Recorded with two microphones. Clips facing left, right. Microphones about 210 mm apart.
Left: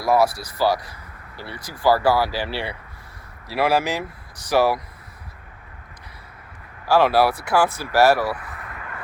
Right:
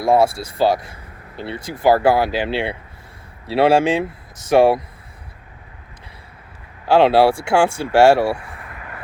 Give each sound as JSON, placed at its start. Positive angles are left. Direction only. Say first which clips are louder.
{"t": 0.0, "sound": "speech", "louder": "right 3 dB", "side_deg": -25}
{"t": 6.8, "sound": "speech", "louder": "right 4 dB", "side_deg": -25}